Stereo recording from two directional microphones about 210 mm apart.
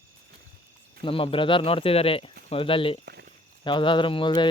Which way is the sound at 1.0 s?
25° left (ahead or behind).